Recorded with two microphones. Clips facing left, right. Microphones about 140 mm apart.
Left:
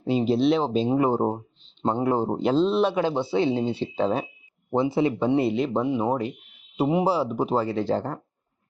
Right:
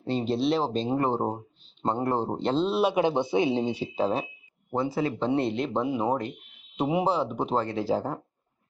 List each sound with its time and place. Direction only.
0.0 s speech: centre (ahead or behind)
2.9 s speech: 20° right (ahead or behind); by 4.3 s centre (ahead or behind)
4.7 s speech: 20° left (ahead or behind)
5.3 s speech: 5° left (ahead or behind)